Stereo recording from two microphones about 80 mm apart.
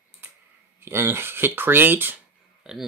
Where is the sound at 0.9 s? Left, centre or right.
Right.